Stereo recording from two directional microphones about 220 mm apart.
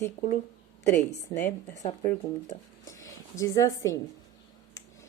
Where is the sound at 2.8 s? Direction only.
15° left (ahead or behind).